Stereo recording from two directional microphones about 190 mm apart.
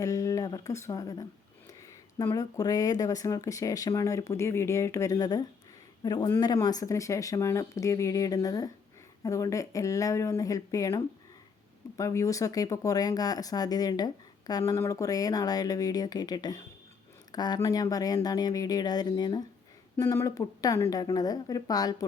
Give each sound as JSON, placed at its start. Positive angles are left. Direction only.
{"t": 0.0, "sound": "speech", "side_deg": 15}